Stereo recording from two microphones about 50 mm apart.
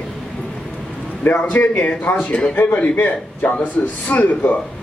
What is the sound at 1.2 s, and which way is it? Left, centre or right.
Speech, left.